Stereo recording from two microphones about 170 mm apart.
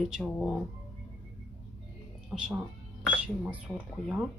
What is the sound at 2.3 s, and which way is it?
Speech, 5° right (ahead or behind).